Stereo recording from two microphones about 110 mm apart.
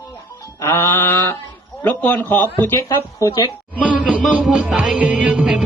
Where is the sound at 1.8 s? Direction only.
15° left (ahead or behind).